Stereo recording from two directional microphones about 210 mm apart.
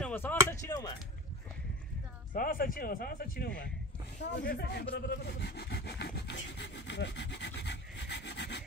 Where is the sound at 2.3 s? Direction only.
40° left (ahead or behind).